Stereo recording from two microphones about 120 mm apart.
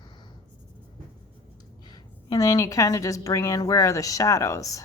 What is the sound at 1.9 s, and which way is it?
A woman's voice, 30° left (ahead or behind).